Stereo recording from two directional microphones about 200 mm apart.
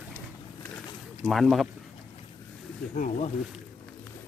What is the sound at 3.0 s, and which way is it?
Speech, 35° left (ahead or behind).